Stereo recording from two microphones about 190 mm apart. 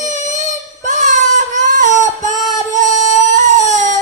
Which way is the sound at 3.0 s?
40° right (ahead or behind).